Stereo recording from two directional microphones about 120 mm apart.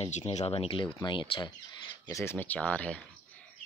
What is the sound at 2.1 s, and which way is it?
Speech, 20° left (ahead or behind).